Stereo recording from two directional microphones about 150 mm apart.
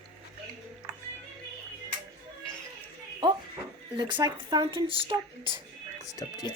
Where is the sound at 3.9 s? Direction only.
30° right (ahead or behind).